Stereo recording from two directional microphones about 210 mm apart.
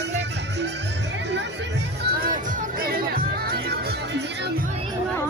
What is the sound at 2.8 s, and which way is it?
Music, 45° right (ahead or behind).